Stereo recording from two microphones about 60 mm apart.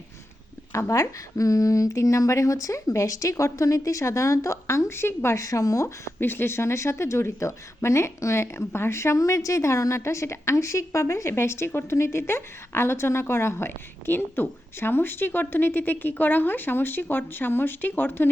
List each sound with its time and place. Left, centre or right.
0.7 s speech: left
5.4 s speech: left
6.1 s speech: left
9.1 s a woman's voice: left